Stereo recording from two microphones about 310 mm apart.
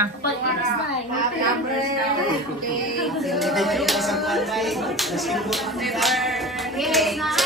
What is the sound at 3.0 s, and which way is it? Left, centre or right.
Speech, centre.